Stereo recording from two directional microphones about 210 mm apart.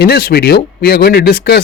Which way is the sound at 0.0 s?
45° left (ahead or behind).